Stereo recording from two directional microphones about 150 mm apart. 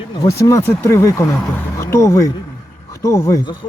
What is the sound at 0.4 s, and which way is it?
Speech, 15° left (ahead or behind).